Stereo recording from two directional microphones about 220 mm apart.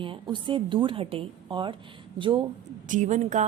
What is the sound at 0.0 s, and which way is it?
A woman's voice, 20° right (ahead or behind).